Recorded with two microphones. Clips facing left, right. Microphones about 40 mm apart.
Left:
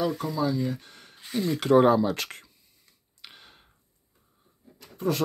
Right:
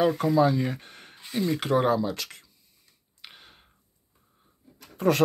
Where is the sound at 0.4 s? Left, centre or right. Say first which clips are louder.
Right 3 dB; right.